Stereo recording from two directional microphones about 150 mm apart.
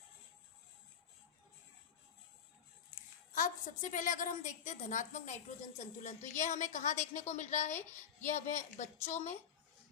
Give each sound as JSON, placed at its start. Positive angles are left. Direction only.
{"t": 3.3, "sound": "a woman's voice", "side_deg": 60}